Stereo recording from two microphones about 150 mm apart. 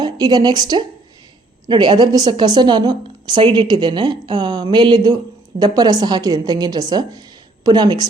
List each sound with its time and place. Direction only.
0.0 s a woman's voice: 25° right (ahead or behind)